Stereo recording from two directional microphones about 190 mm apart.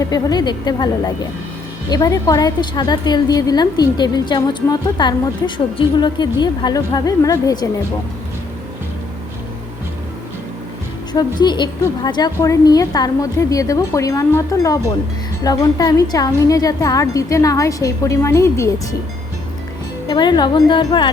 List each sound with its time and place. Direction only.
0.0 s a woman's voice: 20° left (ahead or behind)
11.1 s a woman's voice: 20° left (ahead or behind)
20.1 s a woman's voice: 20° left (ahead or behind)